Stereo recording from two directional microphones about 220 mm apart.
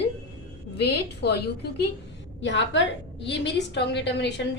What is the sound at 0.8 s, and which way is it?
Speech, 50° left (ahead or behind).